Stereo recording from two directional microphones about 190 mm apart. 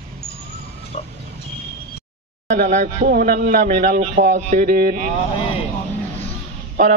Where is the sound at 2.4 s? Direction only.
40° right (ahead or behind).